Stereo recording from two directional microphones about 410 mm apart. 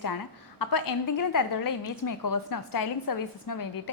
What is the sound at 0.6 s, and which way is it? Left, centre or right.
A woman's voice, left.